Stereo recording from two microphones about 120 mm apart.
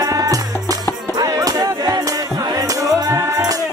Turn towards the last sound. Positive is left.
turn(degrees=-30)  # may be behind; listen again after turning